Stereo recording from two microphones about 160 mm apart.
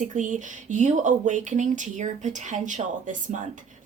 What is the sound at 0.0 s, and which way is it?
Speech, 50° right (ahead or behind).